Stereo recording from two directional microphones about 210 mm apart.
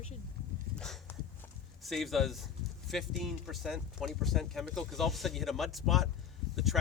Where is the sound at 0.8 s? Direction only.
5° left (ahead or behind).